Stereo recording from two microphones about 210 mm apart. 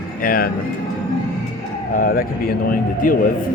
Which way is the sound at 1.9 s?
45° left (ahead or behind).